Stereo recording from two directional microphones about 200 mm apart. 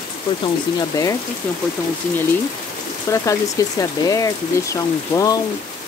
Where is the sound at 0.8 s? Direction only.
15° left (ahead or behind).